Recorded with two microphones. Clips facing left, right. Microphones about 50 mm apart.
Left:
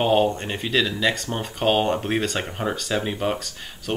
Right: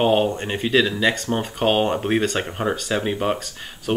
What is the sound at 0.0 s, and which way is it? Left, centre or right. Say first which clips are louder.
Speech: right 1 dB; centre.